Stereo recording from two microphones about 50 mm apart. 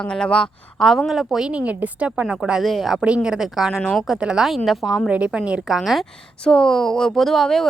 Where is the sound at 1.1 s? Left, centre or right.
Centre.